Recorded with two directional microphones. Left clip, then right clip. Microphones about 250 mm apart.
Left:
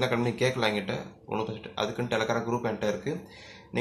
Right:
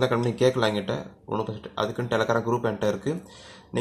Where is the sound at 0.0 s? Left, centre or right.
Right.